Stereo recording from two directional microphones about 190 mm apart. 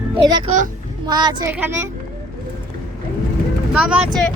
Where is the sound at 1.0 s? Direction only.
20° right (ahead or behind).